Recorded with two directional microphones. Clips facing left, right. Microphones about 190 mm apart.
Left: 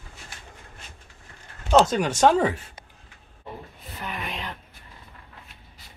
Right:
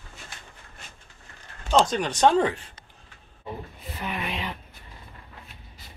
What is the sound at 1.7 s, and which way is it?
Speech, 5° left (ahead or behind).